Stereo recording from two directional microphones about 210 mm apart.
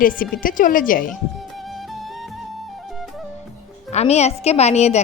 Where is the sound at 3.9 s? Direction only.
30° left (ahead or behind).